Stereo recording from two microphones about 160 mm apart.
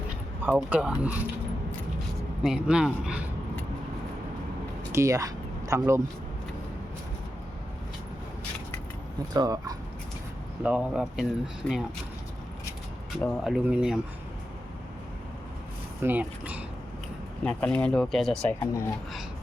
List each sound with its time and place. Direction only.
0.4 s speech: 10° right (ahead or behind)
2.4 s speech: 5° right (ahead or behind)
4.9 s speech: 20° right (ahead or behind)
9.3 s speech: 25° right (ahead or behind)
10.6 s speech: 10° right (ahead or behind)
11.6 s speech: 5° left (ahead or behind)
13.1 s speech: centre (ahead or behind)
16.0 s speech: 10° right (ahead or behind)
17.4 s speech: 5° left (ahead or behind)
18.6 s speech: 15° left (ahead or behind)